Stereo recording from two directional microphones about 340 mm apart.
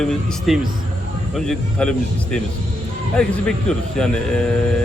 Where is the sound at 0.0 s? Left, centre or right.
Centre.